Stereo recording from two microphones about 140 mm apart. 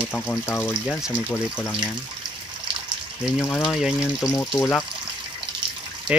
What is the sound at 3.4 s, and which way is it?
Speech, 15° left (ahead or behind).